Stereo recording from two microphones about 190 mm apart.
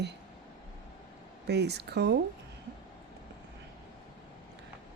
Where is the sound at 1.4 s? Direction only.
60° right (ahead or behind).